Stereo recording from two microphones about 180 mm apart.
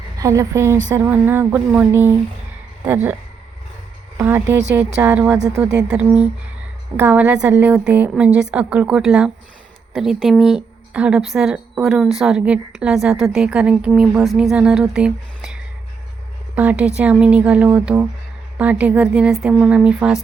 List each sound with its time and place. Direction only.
0.2 s speech: 15° right (ahead or behind)
4.2 s a woman's voice: 15° right (ahead or behind)